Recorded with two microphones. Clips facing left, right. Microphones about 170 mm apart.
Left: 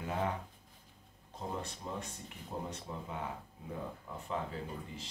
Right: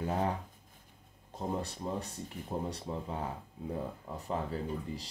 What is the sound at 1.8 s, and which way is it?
Speech, 35° right (ahead or behind).